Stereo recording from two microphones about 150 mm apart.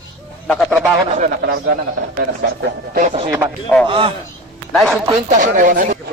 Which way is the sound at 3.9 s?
35° right (ahead or behind).